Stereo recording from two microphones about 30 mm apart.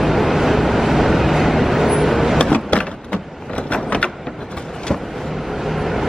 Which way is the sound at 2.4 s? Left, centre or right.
Left.